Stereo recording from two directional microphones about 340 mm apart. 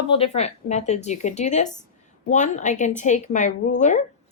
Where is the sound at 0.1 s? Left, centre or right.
Centre.